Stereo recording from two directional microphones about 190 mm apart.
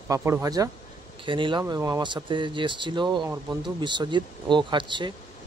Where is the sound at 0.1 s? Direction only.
15° right (ahead or behind).